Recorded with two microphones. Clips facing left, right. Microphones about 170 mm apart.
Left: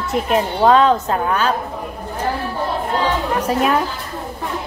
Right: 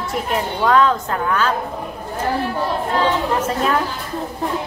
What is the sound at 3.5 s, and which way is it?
Speech, 5° left (ahead or behind).